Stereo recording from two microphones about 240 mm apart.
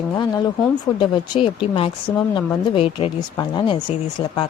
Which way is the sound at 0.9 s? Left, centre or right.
Centre.